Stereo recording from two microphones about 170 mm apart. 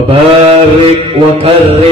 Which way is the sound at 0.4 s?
35° right (ahead or behind).